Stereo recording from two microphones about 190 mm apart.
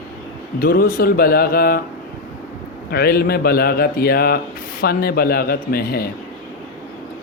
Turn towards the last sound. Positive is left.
turn(degrees=55)  # may be behind; listen again after turning